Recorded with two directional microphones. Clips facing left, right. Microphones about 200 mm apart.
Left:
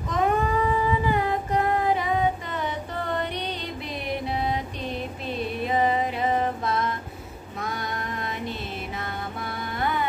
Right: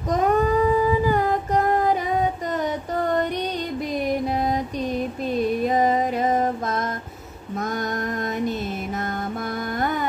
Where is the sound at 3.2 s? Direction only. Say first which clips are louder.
Right 6 dB; 45° right (ahead or behind).